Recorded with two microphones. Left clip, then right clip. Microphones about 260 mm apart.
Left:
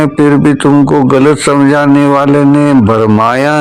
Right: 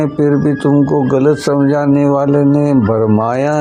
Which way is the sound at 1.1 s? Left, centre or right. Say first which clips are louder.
Left 4 dB; left.